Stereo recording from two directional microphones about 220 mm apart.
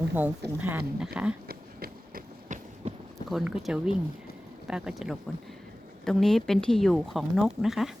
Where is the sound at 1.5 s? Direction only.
45° right (ahead or behind).